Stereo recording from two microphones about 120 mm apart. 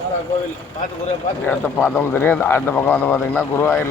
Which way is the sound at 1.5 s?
15° left (ahead or behind).